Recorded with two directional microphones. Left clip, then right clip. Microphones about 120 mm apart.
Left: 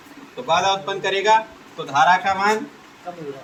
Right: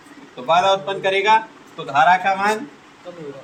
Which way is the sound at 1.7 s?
30° right (ahead or behind).